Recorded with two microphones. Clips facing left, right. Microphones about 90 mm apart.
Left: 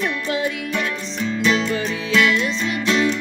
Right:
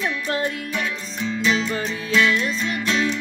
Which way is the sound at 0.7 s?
5° left (ahead or behind).